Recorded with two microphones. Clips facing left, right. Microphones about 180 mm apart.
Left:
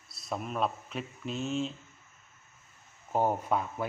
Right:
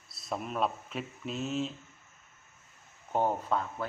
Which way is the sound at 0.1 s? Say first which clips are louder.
Even; centre (ahead or behind).